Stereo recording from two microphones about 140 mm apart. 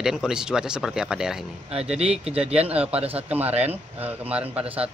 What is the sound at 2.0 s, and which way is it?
Speech, 45° right (ahead or behind).